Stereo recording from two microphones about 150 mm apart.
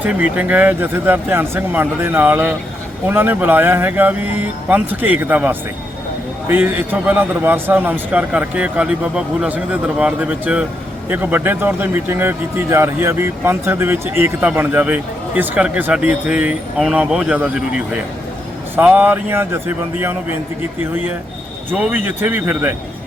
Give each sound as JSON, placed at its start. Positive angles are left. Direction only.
{"t": 0.0, "sound": "speech", "side_deg": -10}
{"t": 21.7, "sound": "speech", "side_deg": -10}